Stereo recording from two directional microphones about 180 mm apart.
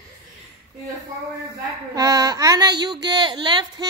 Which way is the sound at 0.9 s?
20° right (ahead or behind).